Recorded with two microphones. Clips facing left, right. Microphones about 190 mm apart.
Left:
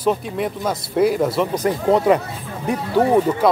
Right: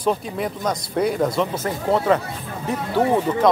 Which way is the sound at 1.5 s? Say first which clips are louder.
Left 4 dB; 15° left (ahead or behind).